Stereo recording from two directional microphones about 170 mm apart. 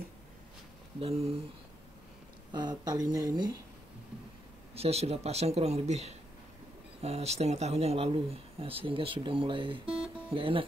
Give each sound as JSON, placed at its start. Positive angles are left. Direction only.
{"t": 0.9, "sound": "speech", "side_deg": -35}
{"t": 2.5, "sound": "speech", "side_deg": -25}
{"t": 4.7, "sound": "speech", "side_deg": -35}